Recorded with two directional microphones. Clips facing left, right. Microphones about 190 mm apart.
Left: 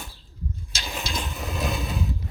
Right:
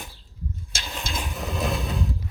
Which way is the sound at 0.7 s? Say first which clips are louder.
Left 2 dB; 50° right (ahead or behind).